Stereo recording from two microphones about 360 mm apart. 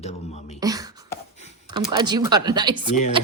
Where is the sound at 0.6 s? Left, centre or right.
Centre.